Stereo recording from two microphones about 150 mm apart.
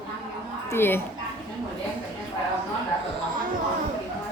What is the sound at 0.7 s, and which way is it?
Speech, 15° left (ahead or behind).